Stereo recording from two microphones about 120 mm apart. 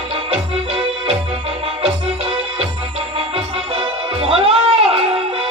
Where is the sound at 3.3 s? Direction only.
55° right (ahead or behind).